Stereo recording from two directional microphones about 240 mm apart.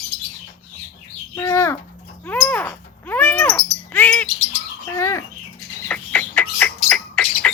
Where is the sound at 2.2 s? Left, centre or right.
Centre.